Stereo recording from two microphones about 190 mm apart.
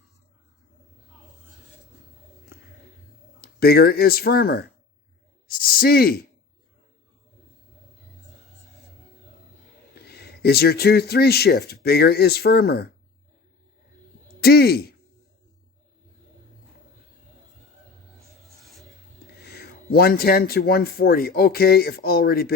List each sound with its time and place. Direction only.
3.4 s speech: 55° left (ahead or behind)
5.5 s a sound: 50° left (ahead or behind)
10.1 s speech: 55° left (ahead or behind)
14.4 s speech: 55° left (ahead or behind)
18.6 s filing: centre (ahead or behind)
19.5 s speech: 55° left (ahead or behind)